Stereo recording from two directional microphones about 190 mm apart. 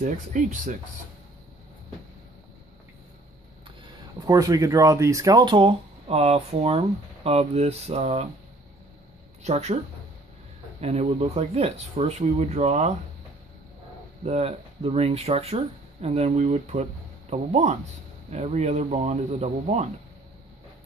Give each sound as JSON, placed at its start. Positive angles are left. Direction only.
{"t": 0.0, "sound": "speech", "side_deg": -40}
{"t": 4.2, "sound": "speech", "side_deg": -20}
{"t": 9.4, "sound": "speech", "side_deg": -35}
{"t": 10.8, "sound": "speech", "side_deg": -35}
{"t": 14.2, "sound": "speech", "side_deg": -35}